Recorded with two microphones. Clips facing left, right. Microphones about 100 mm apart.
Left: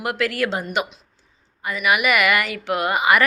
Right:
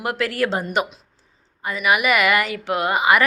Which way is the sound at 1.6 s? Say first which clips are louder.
Right 1 dB; 30° right (ahead or behind).